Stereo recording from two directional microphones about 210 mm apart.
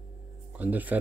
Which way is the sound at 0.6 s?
10° right (ahead or behind).